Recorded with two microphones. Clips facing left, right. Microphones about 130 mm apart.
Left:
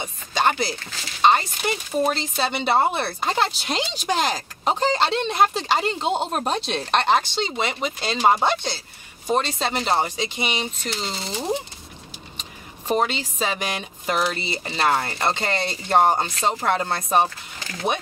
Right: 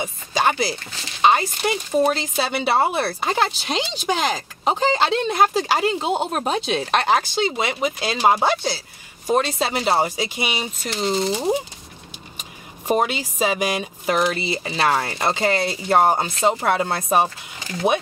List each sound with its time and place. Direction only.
0.0 s chopping: 5° right (ahead or behind)
1.2 s speech: 5° right (ahead or behind)